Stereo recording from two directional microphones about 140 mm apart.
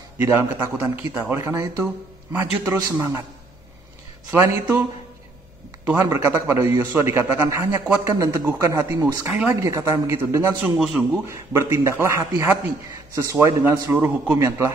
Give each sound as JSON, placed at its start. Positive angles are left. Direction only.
{"t": 0.2, "sound": "a man's voice", "side_deg": -15}
{"t": 4.3, "sound": "a man's voice", "side_deg": -15}
{"t": 6.0, "sound": "a man's voice", "side_deg": -25}